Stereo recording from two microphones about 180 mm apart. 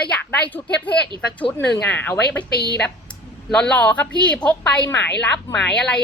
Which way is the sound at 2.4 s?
65° left (ahead or behind).